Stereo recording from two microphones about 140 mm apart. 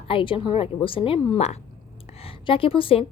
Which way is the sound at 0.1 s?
40° left (ahead or behind).